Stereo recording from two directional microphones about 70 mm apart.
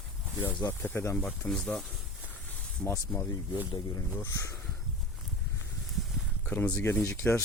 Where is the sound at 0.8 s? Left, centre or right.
Left.